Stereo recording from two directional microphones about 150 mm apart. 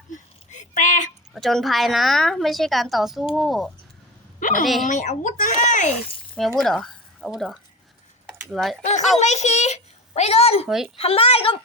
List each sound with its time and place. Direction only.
0.1 s a sound: 55° left (ahead or behind)
1.3 s a woman's voice: centre (ahead or behind)
4.4 s a sound: 60° left (ahead or behind)
4.6 s a woman's voice: centre (ahead or behind)
4.9 s speech: 55° left (ahead or behind)
6.6 s speech: 5° left (ahead or behind)
8.8 s a child's voice: 50° left (ahead or behind)